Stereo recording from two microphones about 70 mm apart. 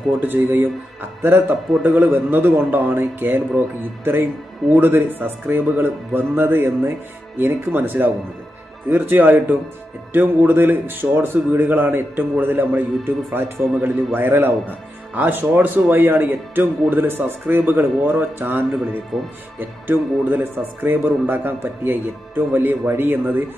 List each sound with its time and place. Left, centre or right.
0.2 s speech: right
19.1 s speech: centre
19.9 s speech: right